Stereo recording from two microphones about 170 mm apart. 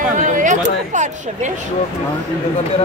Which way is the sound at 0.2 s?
50° right (ahead or behind).